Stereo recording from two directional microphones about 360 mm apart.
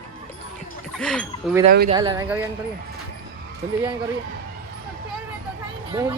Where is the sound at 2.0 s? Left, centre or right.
Centre.